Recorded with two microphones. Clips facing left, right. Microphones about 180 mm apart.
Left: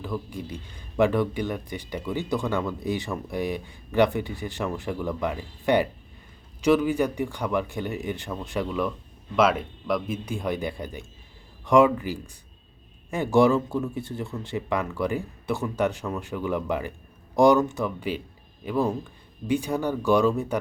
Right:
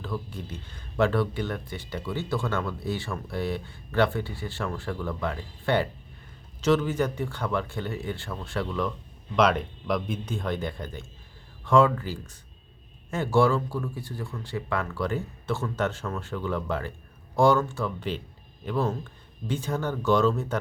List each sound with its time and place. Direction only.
0.0 s speech: 15° left (ahead or behind)